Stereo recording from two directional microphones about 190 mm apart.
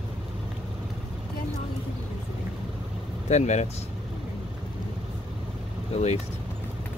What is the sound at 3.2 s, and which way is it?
Speech, 40° left (ahead or behind).